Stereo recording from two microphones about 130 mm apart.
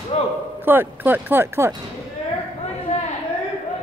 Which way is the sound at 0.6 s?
15° right (ahead or behind).